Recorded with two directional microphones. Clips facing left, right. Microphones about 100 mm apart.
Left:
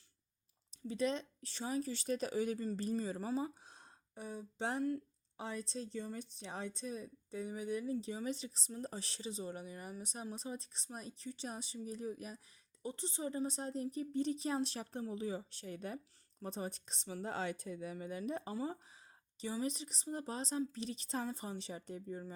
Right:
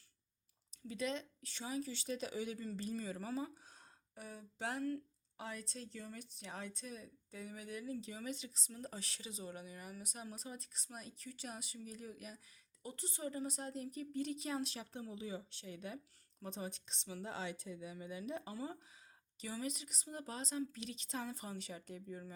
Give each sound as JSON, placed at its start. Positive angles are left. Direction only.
{"t": 0.7, "sound": "speech", "side_deg": 30}